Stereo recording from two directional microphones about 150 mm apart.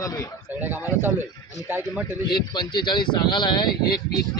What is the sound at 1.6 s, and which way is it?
Speech, 15° right (ahead or behind).